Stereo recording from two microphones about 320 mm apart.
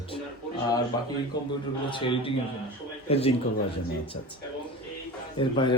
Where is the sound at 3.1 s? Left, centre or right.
Centre.